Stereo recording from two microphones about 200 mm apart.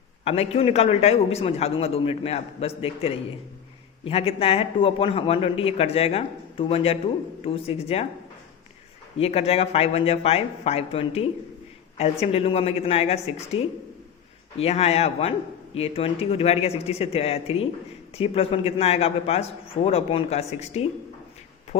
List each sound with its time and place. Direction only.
0.3 s a man's voice: 30° left (ahead or behind)
9.1 s a man's voice: 30° left (ahead or behind)